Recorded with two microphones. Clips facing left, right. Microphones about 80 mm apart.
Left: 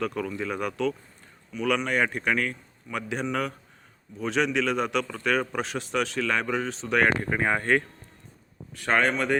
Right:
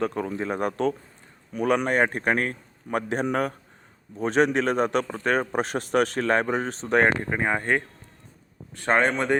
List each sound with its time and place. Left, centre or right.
0.0 s a man's voice: right
7.3 s speech: centre
8.7 s a man's voice: right